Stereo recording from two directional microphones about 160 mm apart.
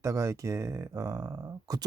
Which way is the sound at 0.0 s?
20° right (ahead or behind).